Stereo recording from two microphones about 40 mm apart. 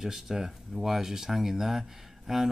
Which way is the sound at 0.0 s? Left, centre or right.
Centre.